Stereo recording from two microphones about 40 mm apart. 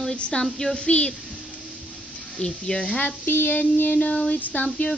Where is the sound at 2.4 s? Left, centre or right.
Left.